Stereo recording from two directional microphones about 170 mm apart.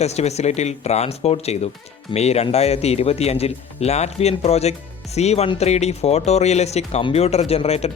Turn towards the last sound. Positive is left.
turn(degrees=40)  # may be behind; listen again after turning